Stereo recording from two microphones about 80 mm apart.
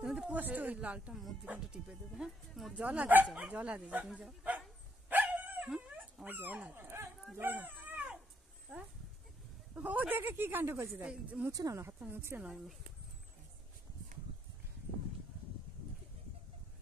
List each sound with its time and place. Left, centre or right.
0.0 s a sound: centre
0.4 s speech: right
1.1 s speech: centre
2.7 s speech: centre
5.1 s dog: right
6.2 s speech: right
7.3 s dog: right
9.8 s speech: right
11.1 s speech: centre
11.5 s speech: right
12.1 s speech: right
12.4 s speech: centre